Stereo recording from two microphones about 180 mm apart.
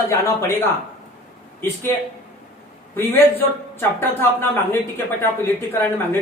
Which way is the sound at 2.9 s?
10° left (ahead or behind).